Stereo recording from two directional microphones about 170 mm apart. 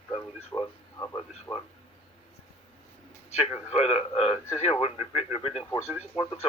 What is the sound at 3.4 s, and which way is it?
Speech, 40° left (ahead or behind).